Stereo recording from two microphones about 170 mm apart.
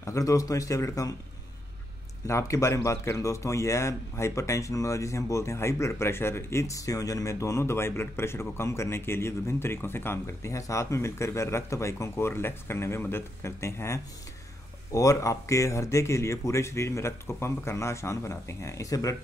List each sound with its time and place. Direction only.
0.0 s speech: 20° left (ahead or behind)
2.2 s a man's voice: 15° left (ahead or behind)